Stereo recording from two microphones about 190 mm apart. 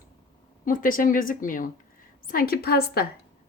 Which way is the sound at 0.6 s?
45° left (ahead or behind).